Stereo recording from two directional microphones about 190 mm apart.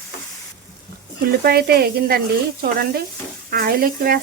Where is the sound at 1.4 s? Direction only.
55° right (ahead or behind).